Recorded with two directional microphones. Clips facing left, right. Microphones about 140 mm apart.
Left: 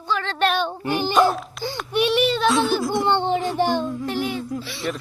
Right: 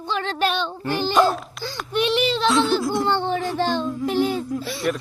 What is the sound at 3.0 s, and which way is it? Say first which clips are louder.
Speech: left 2 dB; 20° left (ahead or behind).